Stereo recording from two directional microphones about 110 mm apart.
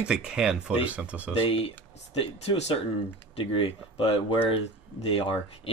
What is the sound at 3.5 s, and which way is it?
Speech, 60° left (ahead or behind).